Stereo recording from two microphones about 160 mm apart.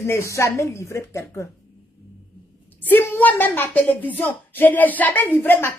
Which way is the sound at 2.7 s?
10° left (ahead or behind).